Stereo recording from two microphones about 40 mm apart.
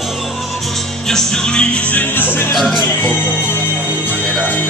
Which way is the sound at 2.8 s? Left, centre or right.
Left.